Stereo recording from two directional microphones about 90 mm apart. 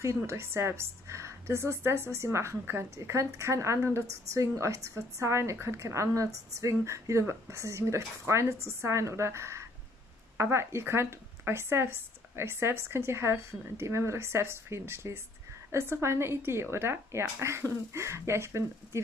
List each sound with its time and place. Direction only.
0.0 s a woman's voice: 30° right (ahead or behind)